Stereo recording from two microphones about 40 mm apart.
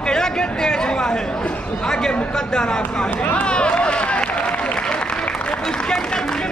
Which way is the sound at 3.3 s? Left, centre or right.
Left.